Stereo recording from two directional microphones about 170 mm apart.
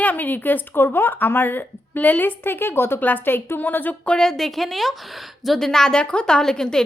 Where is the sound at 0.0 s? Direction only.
10° left (ahead or behind).